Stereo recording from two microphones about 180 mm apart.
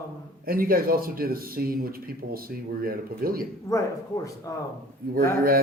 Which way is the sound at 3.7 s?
15° left (ahead or behind).